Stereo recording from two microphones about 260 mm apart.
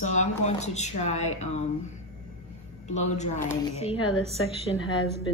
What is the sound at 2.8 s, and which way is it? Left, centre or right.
Speech, left.